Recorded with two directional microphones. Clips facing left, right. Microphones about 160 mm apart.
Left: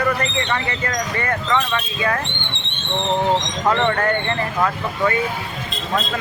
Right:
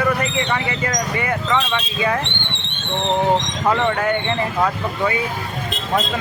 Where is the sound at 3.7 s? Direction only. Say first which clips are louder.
Even; 5° right (ahead or behind).